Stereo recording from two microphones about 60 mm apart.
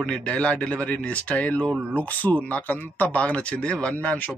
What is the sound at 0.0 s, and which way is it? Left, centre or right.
A man's voice, centre.